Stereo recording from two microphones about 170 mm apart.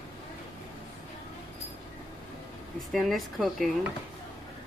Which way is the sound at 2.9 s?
Centre (ahead or behind).